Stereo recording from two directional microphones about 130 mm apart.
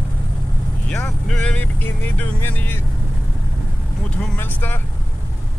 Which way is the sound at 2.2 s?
15° left (ahead or behind).